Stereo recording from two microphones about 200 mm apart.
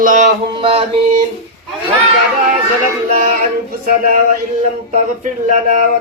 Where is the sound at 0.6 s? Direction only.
25° right (ahead or behind).